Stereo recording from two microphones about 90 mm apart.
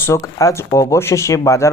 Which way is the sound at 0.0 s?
35° left (ahead or behind).